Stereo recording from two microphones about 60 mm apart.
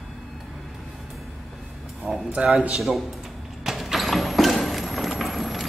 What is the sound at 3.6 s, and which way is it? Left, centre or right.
Clip-clop, centre.